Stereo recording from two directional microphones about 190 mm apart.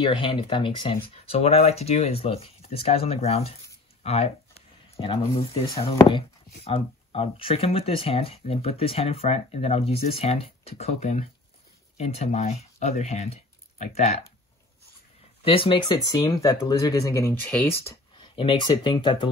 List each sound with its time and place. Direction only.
0.0 s speech: 25° left (ahead or behind)
4.0 s a sound: 35° left (ahead or behind)
5.0 s speech: 25° left (ahead or behind)
15.4 s speech: 30° left (ahead or behind); by 17.9 s 10° left (ahead or behind)
18.3 s speech: 30° left (ahead or behind)